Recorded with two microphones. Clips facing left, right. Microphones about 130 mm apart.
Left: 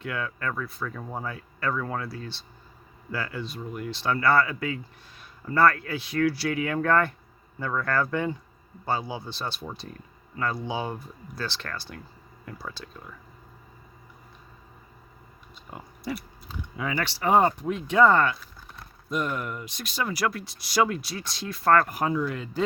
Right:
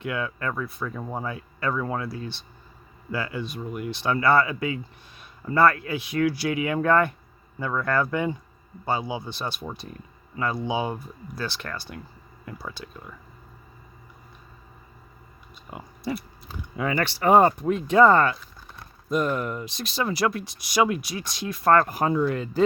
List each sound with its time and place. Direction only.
0.0 s speech: 20° right (ahead or behind)
15.7 s speech: 10° right (ahead or behind)
16.5 s speech: 50° right (ahead or behind)